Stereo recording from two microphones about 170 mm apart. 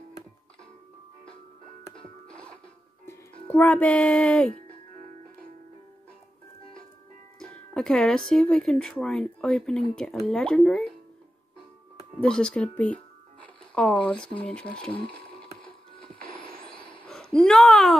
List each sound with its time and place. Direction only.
3.1 s speech: 10° left (ahead or behind)
7.3 s speech: 5° left (ahead or behind)
12.2 s speech: 5° left (ahead or behind)
12.7 s music: 10° left (ahead or behind)
14.4 s speech: 5° left (ahead or behind)
16.3 s vehicle: 30° left (ahead or behind)
17.0 s speech: 5° left (ahead or behind)